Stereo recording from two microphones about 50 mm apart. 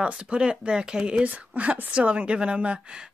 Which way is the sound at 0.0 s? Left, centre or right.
Centre.